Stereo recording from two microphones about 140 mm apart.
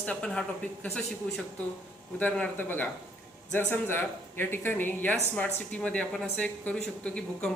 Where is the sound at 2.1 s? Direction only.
10° left (ahead or behind).